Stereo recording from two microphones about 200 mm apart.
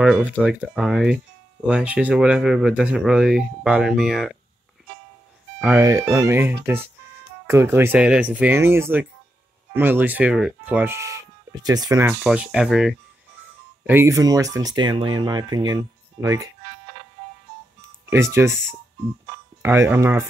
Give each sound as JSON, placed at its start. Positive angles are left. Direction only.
{"t": 0.0, "sound": "speech", "side_deg": -5}
{"t": 5.6, "sound": "speech", "side_deg": -10}
{"t": 13.8, "sound": "speech", "side_deg": -15}
{"t": 18.1, "sound": "speech", "side_deg": -15}
{"t": 19.6, "sound": "speech", "side_deg": -10}